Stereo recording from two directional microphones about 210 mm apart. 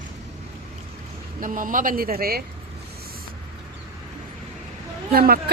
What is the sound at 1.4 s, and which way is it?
Speech, 40° right (ahead or behind).